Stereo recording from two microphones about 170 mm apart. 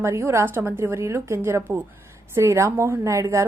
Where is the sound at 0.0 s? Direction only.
15° right (ahead or behind).